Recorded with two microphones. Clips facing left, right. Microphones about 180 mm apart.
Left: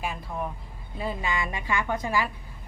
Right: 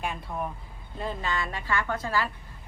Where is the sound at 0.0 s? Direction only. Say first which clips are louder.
Even; centre (ahead or behind).